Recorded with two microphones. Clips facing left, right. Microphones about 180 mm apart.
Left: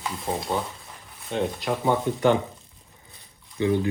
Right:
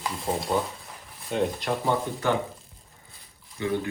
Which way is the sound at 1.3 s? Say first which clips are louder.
Even; centre (ahead or behind).